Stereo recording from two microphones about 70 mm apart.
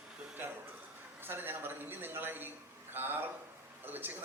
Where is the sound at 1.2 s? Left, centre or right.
Right.